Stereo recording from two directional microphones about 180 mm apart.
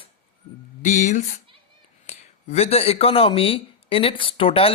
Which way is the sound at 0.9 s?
45° left (ahead or behind).